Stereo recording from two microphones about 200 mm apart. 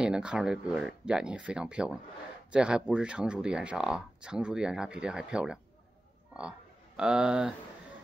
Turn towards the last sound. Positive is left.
turn(degrees=-5)  # may be behind; listen again after turning